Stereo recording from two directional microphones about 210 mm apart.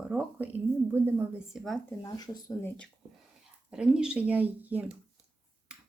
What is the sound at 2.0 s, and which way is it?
Speech, 20° left (ahead or behind).